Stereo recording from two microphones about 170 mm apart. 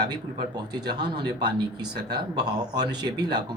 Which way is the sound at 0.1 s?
25° right (ahead or behind).